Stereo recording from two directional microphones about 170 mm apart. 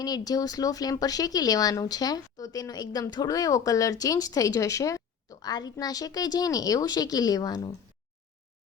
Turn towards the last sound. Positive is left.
turn(degrees=20)  # may be behind; listen again after turning